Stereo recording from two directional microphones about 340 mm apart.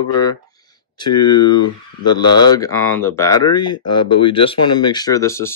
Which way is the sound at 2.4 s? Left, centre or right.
Centre.